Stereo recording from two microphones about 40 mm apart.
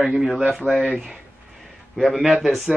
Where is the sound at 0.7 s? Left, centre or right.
Left.